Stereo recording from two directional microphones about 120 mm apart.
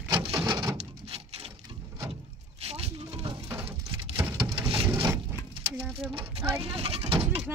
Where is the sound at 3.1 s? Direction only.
50° right (ahead or behind).